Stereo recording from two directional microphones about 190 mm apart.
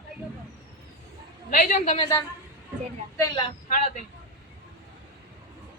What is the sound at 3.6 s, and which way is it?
Speech, 35° left (ahead or behind).